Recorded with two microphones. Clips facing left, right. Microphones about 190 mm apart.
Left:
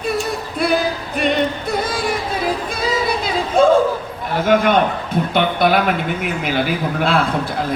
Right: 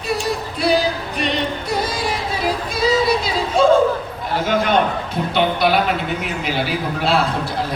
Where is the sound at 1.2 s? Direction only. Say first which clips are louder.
Left 5 dB; 50° left (ahead or behind).